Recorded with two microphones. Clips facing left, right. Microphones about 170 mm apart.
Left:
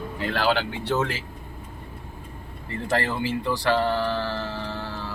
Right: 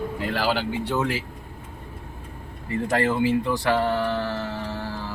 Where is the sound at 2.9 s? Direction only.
15° right (ahead or behind).